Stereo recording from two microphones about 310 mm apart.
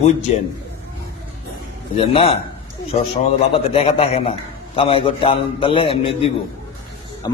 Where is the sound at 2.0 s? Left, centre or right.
Centre.